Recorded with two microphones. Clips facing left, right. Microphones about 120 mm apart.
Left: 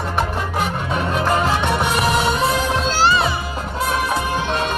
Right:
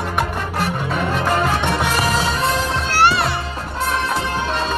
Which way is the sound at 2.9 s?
65° right (ahead or behind).